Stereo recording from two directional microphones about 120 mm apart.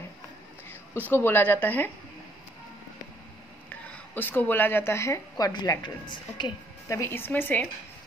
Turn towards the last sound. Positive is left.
turn(degrees=15)  # may be behind; listen again after turning